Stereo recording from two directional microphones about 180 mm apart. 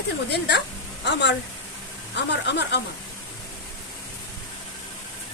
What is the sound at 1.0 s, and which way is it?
A woman's voice, 75° left (ahead or behind).